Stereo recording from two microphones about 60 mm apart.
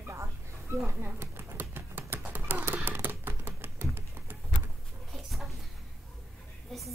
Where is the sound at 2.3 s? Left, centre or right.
Right.